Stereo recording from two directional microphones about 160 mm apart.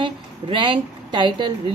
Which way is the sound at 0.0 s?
30° right (ahead or behind).